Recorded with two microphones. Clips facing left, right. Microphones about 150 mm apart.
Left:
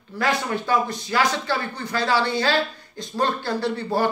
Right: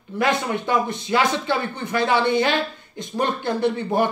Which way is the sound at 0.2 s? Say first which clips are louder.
Right 2 dB; 20° right (ahead or behind).